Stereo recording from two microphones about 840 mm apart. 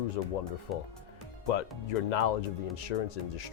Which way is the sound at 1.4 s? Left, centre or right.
Left.